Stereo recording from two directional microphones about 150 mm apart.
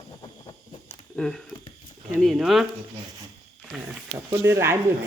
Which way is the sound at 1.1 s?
5° left (ahead or behind).